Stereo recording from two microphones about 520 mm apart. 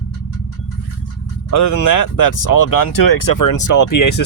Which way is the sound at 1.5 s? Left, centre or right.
Left.